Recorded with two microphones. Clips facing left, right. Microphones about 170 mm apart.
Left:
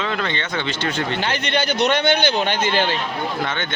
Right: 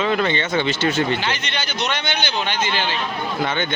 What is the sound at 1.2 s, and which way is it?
A man's voice, 55° left (ahead or behind).